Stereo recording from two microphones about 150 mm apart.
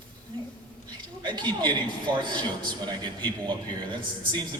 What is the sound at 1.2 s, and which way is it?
A man's voice, 30° right (ahead or behind).